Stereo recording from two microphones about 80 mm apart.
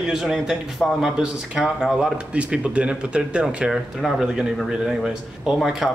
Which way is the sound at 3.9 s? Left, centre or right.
Centre.